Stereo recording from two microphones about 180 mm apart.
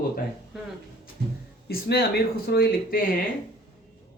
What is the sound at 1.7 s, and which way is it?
Speech, 60° left (ahead or behind).